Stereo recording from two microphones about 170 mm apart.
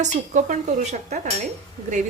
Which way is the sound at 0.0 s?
45° right (ahead or behind).